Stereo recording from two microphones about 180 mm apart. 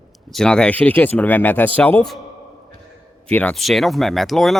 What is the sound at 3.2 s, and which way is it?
Speech, 5° left (ahead or behind).